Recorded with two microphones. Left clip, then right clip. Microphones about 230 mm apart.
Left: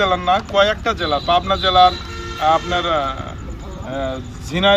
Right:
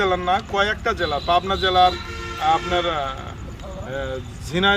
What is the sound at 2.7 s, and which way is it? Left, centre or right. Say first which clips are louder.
Speech: left 3 dB; centre.